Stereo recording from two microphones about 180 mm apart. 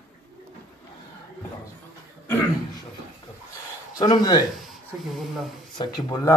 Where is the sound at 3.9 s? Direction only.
25° left (ahead or behind).